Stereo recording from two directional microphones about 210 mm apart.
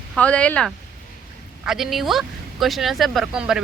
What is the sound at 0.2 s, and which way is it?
A woman's voice, 5° left (ahead or behind).